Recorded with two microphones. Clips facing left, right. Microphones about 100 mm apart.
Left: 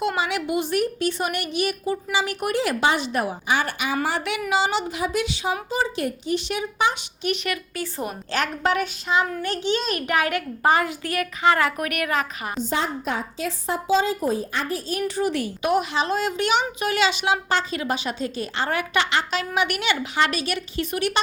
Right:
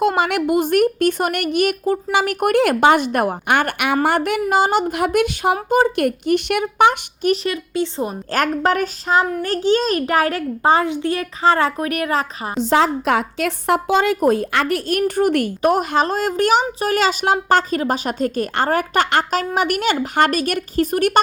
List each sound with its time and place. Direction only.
0.0 s a woman's voice: 50° right (ahead or behind)
7.4 s a woman's voice: 25° right (ahead or behind)
8.3 s a child's voice: 45° right (ahead or behind)
12.5 s a woman's voice: 90° right; by 21.2 s 45° right (ahead or behind)